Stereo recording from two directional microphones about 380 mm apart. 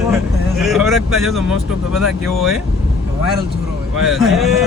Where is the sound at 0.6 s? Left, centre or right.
Centre.